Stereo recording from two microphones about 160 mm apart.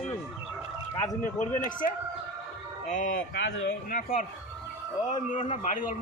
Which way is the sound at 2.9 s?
50° left (ahead or behind).